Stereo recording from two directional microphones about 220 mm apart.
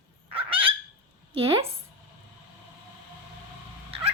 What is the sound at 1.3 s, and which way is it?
Speech, 25° right (ahead or behind).